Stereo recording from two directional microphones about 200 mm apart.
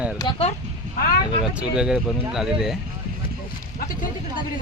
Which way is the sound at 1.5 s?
5° right (ahead or behind).